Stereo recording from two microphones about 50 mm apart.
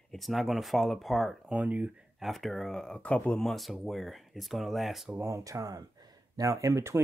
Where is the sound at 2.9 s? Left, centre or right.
Left.